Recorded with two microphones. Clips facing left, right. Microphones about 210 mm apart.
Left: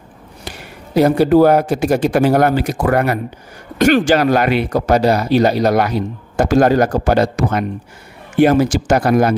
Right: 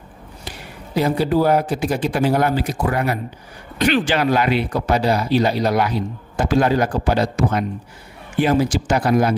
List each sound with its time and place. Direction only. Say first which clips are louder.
0.9 s speech: left 7 dB; 45° left (ahead or behind)
2.5 s speech: left 5 dB; 70° left (ahead or behind)
3.7 s speech: left 6 dB; 45° left (ahead or behind)
4.6 s speech: left 5 dB; 40° left (ahead or behind)
7.2 s speech: left 3 dB; 65° left (ahead or behind)
8.8 s speech: left 4 dB; 45° left (ahead or behind)